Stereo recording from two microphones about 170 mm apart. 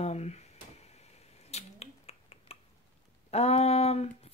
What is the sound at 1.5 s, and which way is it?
Finger snapping, 35° left (ahead or behind).